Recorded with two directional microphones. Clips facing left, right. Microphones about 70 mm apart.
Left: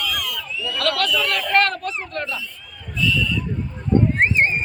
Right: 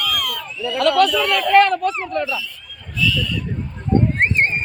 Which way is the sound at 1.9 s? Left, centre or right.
Right.